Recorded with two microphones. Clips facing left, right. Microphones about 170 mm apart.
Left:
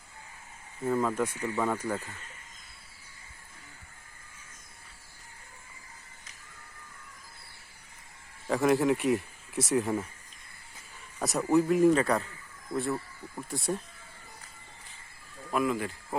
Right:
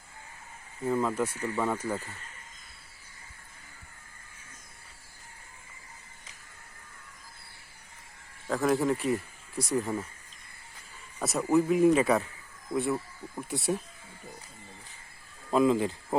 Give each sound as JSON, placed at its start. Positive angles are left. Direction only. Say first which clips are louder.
{"t": 0.9, "sound": "speech", "louder": "even", "side_deg": -5}
{"t": 8.4, "sound": "speech", "louder": "left 2 dB", "side_deg": 0}
{"t": 11.2, "sound": "speech", "louder": "even", "side_deg": 0}
{"t": 15.5, "sound": "speech", "louder": "right 5 dB", "side_deg": -25}